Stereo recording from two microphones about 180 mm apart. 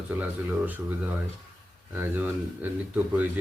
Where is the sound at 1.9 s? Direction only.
10° right (ahead or behind).